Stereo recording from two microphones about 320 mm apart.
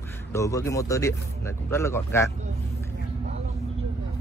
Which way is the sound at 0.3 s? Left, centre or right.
Centre.